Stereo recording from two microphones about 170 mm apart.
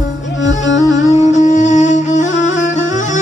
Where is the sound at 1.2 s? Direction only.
45° left (ahead or behind).